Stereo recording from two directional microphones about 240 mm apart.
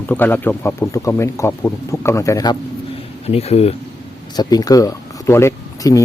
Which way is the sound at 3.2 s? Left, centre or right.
Left.